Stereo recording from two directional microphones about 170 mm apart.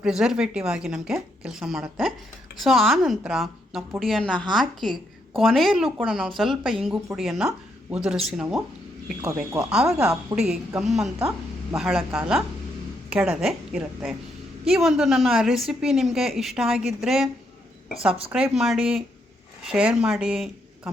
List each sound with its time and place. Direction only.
0.0 s a woman's voice: 5° right (ahead or behind)
9.2 s speech: 20° right (ahead or behind)
9.6 s a woman's voice: 5° right (ahead or behind)
18.3 s a woman's voice: 5° right (ahead or behind)